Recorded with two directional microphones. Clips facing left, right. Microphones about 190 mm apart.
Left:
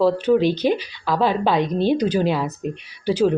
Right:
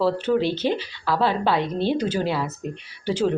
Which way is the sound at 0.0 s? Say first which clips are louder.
Left 4 dB; 15° left (ahead or behind).